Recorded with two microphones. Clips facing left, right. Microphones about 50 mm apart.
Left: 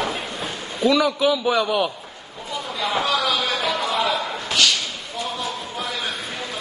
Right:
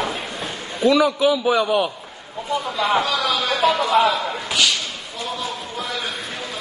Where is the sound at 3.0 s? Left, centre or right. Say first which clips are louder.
Even; centre.